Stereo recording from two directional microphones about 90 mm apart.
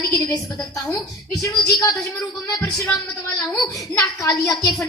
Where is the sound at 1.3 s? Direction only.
40° left (ahead or behind).